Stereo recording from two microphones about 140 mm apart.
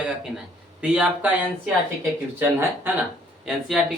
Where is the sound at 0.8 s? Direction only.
10° right (ahead or behind).